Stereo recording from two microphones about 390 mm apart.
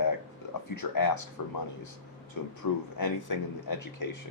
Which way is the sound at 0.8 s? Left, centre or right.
Left.